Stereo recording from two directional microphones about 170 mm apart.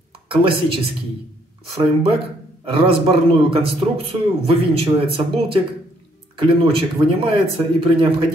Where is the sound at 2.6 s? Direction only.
30° right (ahead or behind).